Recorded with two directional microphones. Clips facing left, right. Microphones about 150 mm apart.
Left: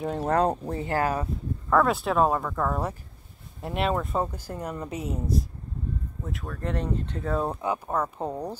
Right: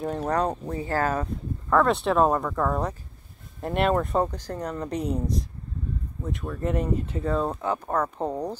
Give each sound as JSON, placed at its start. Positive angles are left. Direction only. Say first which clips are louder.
{"t": 0.4, "sound": "speech", "louder": "left 2 dB", "side_deg": 30}
{"t": 0.8, "sound": "speech", "louder": "right 1 dB", "side_deg": 15}
{"t": 7.3, "sound": "speech", "louder": "left 1 dB", "side_deg": 10}